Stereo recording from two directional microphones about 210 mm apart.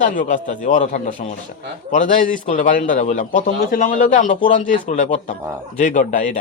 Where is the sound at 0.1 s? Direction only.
40° left (ahead or behind).